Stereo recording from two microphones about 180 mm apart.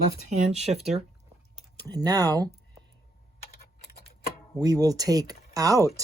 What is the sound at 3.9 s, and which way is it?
Tick-tock, 60° left (ahead or behind).